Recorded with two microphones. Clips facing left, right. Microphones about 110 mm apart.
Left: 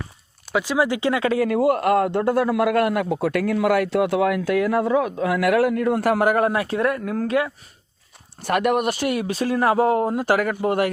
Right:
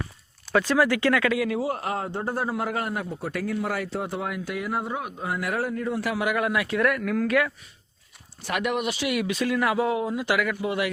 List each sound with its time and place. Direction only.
0.5 s speech: 15° left (ahead or behind)
1.3 s speech: 40° left (ahead or behind)
1.5 s a man's voice: 65° left (ahead or behind); by 7.5 s 25° left (ahead or behind)
8.4 s speech: 50° left (ahead or behind)
9.1 s speech: 35° left (ahead or behind)